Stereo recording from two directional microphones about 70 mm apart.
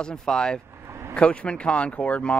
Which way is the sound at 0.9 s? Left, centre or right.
Right.